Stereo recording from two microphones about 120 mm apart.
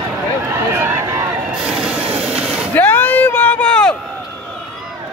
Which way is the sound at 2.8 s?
15° left (ahead or behind).